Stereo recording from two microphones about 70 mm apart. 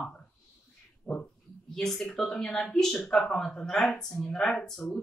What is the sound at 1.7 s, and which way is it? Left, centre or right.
Speech, centre.